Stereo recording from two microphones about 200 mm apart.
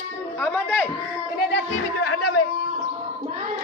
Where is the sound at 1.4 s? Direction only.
55° left (ahead or behind); by 2.1 s 85° left.